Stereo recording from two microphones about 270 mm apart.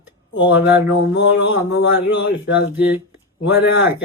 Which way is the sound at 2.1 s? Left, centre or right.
Left.